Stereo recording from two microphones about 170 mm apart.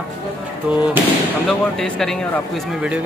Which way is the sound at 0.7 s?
5° right (ahead or behind).